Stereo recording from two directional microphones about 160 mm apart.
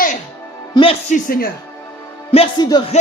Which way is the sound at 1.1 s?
65° left (ahead or behind).